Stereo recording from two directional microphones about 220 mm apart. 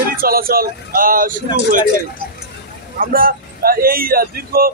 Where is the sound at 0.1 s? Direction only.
40° right (ahead or behind).